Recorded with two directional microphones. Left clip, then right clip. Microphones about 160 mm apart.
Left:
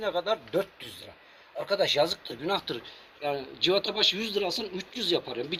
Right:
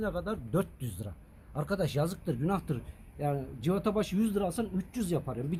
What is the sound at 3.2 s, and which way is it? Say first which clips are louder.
Speech: left 6 dB; 20° right (ahead or behind).